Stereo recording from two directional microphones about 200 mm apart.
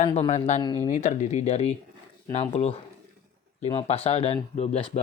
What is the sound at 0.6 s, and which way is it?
Speech, 20° left (ahead or behind).